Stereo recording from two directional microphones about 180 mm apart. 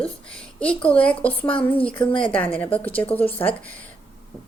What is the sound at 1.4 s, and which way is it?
Speech, 30° left (ahead or behind).